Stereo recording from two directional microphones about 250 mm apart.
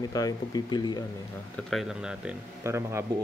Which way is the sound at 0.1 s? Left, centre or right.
Centre.